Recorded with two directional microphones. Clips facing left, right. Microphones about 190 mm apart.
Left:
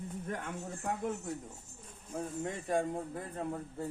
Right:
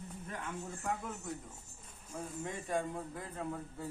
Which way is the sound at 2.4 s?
45° left (ahead or behind).